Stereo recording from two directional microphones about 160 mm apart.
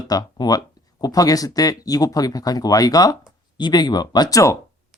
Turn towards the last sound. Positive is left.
turn(degrees=20)  # may be behind; listen again after turning